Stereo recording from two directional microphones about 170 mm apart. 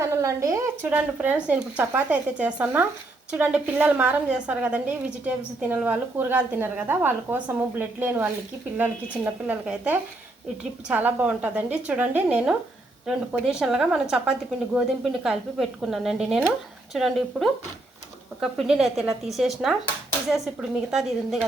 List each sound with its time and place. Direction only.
0.0 s a woman's voice: 20° right (ahead or behind)